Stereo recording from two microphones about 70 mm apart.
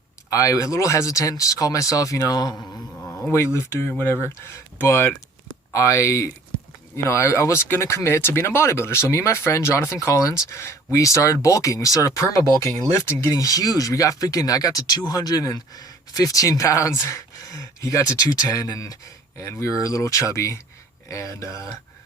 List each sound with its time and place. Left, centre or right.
0.3 s speech: left
3.3 s speech: left
5.7 s speech: left
13.1 s speech: left
13.3 s speech: left
19.4 s speech: left